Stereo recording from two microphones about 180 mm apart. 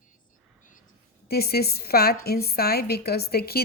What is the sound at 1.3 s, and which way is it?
A woman's voice, 60° left (ahead or behind).